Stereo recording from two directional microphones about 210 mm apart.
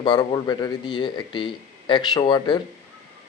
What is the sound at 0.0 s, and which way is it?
Speech, 20° left (ahead or behind).